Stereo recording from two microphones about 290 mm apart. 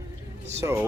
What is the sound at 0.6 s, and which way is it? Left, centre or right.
Speech, centre.